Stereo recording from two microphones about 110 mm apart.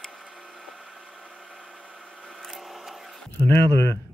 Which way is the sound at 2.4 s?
Centre (ahead or behind).